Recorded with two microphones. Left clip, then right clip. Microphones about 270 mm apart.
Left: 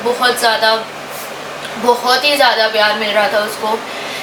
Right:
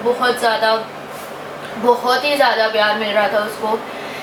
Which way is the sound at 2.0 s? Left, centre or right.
Centre.